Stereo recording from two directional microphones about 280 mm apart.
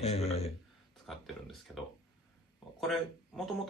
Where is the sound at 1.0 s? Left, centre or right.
Centre.